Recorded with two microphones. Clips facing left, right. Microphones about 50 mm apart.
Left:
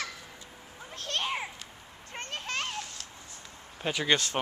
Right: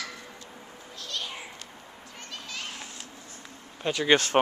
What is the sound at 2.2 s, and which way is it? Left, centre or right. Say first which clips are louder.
Children playing: left 5 dB; left.